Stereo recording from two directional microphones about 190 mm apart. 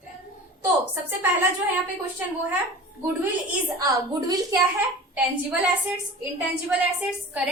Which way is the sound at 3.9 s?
20° right (ahead or behind).